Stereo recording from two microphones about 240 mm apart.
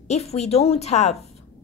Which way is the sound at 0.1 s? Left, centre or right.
Left.